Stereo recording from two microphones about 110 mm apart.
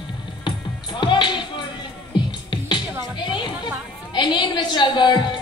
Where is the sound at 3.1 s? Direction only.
45° left (ahead or behind).